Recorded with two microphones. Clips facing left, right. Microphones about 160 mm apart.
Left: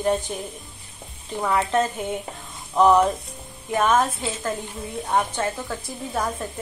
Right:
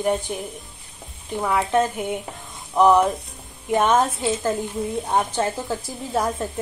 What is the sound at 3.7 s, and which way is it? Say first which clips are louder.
A woman's voice: right 2 dB; 20° right (ahead or behind).